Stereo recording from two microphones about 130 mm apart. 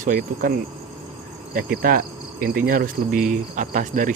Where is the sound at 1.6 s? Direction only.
90° right.